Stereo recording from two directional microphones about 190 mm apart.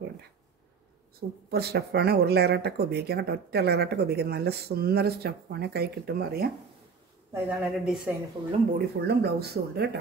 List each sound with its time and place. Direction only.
1.5 s speech: 55° right (ahead or behind)
7.3 s speech: 5° right (ahead or behind)
8.7 s speech: 60° right (ahead or behind)